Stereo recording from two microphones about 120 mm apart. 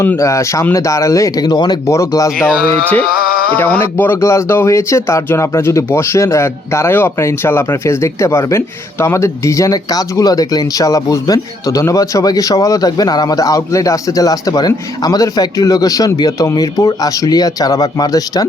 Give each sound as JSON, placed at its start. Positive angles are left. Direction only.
{"t": 0.0, "sound": "speech", "side_deg": 20}
{"t": 3.5, "sound": "speech", "side_deg": 15}